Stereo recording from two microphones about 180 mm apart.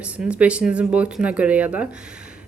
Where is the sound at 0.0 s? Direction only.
5° right (ahead or behind).